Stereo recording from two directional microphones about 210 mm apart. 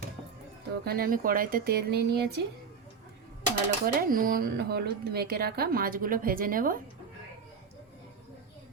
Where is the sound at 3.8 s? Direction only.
40° right (ahead or behind).